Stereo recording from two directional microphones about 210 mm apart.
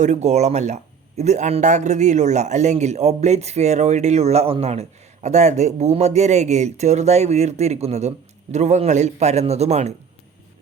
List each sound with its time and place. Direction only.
0.0 s speech: 35° right (ahead or behind)